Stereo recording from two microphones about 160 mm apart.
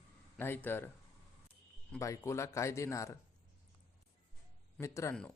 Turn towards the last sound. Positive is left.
turn(degrees=20)  # may be behind; listen again after turning